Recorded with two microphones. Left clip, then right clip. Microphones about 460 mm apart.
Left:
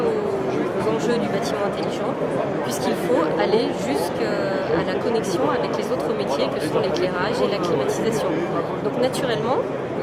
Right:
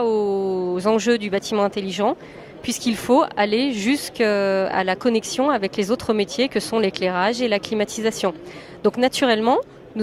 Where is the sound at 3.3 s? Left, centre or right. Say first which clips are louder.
Left 1 dB; right.